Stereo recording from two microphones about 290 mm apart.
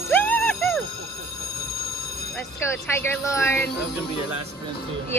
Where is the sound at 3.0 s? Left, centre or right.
Centre.